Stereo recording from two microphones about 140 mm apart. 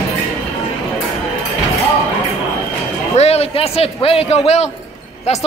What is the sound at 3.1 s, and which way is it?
A man's voice, 50° left (ahead or behind).